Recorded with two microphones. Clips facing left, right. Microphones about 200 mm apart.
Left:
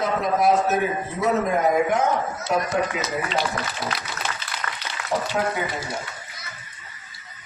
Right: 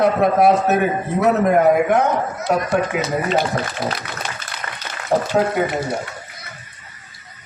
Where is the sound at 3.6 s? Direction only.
50° right (ahead or behind).